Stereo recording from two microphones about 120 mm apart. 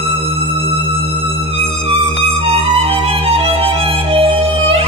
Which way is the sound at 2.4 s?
55° right (ahead or behind).